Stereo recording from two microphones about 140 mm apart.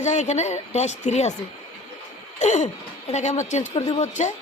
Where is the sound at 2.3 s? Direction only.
55° left (ahead or behind).